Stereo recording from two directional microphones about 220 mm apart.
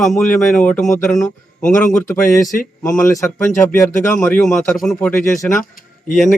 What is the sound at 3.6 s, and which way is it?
Speech, 5° left (ahead or behind).